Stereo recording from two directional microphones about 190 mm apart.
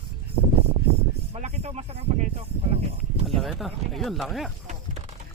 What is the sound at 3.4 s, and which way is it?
Speech, centre (ahead or behind).